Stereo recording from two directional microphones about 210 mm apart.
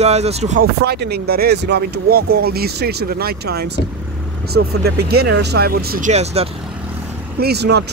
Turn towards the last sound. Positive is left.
turn(degrees=-50)  # may be behind; listen again after turning